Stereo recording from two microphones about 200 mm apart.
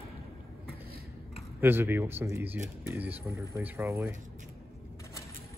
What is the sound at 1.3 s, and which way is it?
Speech, 10° right (ahead or behind).